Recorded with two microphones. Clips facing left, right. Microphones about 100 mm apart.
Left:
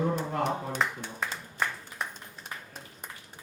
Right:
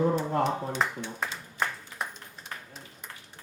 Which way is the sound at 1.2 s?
Centre (ahead or behind).